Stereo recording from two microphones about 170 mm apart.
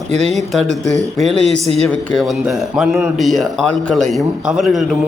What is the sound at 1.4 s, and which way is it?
Speech, 40° right (ahead or behind).